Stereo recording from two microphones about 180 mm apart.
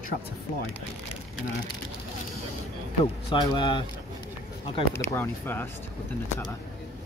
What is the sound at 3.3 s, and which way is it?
Speech, 25° left (ahead or behind).